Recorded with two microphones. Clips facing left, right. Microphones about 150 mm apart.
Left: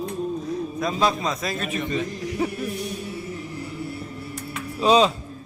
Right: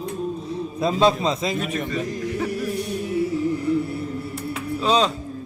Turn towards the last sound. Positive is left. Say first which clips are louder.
# left 3 dB
turn(degrees=10)  # may be behind; listen again after turning